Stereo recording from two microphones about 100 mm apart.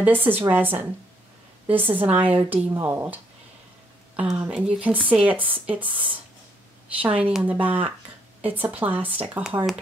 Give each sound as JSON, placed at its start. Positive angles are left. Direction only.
{"t": 0.0, "sound": "a woman's voice", "side_deg": -20}
{"t": 4.5, "sound": "speech", "side_deg": -10}